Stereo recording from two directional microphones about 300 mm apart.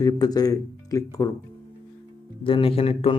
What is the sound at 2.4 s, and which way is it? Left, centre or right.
Speech, centre.